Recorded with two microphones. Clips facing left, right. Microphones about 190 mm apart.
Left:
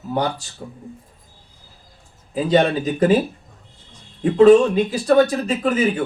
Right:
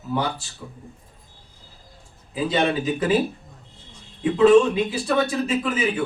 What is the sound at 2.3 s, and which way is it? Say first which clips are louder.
Speech: left 5 dB; 45° left (ahead or behind).